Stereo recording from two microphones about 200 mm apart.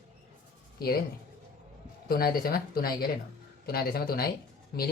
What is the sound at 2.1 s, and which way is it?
Speech, 50° left (ahead or behind).